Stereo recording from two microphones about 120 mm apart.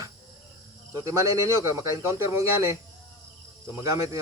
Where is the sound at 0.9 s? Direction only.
25° right (ahead or behind).